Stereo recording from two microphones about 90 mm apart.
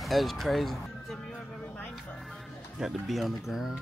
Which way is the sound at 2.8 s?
Centre (ahead or behind).